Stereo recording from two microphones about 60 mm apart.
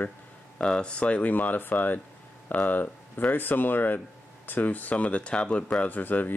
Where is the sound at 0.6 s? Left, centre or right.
Centre.